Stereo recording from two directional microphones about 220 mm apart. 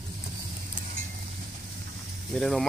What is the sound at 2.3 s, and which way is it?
Speech, centre (ahead or behind).